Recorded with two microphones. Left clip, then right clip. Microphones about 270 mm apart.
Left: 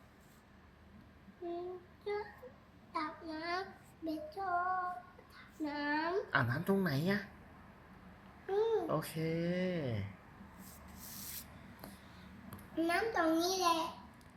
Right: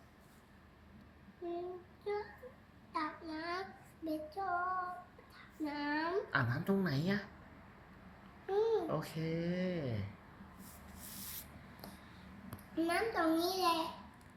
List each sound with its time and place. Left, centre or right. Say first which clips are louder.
1.4 s female singing: even; centre
2.0 s baby cry: even; centre
2.9 s child singing: even; centre
5.4 s a sound: left 1 dB; centre
6.3 s speech: left 4 dB; centre
6.6 s a woman's voice: left 2 dB; centre
6.8 s speech: left 2 dB; centre
8.4 s babbling: even; centre
9.2 s speech: left 2 dB; centre
10.8 s rub: even; centre
12.5 s a child's voice: left 1 dB; centre